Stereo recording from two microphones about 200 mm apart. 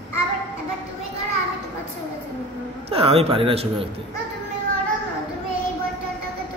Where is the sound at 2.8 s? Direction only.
30° right (ahead or behind).